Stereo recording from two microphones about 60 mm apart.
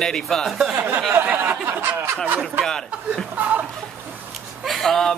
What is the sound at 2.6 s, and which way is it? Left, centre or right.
Speech, centre.